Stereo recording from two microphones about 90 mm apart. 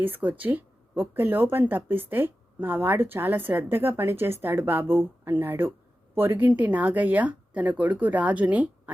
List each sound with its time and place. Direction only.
0.0 s speech: 20° right (ahead or behind)